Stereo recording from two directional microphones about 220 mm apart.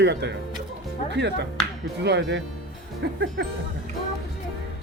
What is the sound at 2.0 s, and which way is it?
Speech, 50° right (ahead or behind).